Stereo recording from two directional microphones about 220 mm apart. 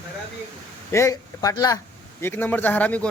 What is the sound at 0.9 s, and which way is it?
A man's voice, 15° left (ahead or behind).